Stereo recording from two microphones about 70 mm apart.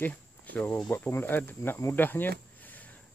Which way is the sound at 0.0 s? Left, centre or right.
Left.